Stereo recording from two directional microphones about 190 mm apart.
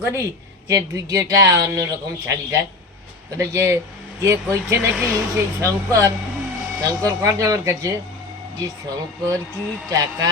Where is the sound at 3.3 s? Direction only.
15° right (ahead or behind).